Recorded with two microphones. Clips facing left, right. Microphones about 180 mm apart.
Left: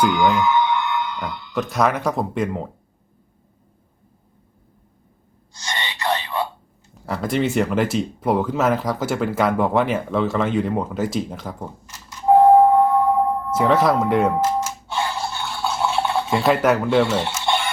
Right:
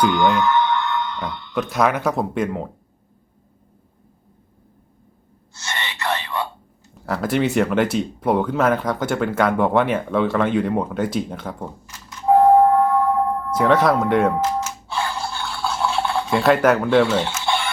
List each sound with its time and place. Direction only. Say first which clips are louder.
0.0 s speech: even; 5° left (ahead or behind)
5.6 s whispering: left 1 dB; 15° left (ahead or behind)
7.0 s speech: right 1 dB; centre (ahead or behind)
12.5 s singing bowl: left 1 dB; 10° left (ahead or behind)
13.6 s music: right 1 dB; centre (ahead or behind)